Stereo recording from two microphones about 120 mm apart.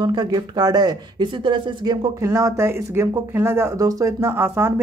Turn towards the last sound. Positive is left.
turn(degrees=-20)  # may be behind; listen again after turning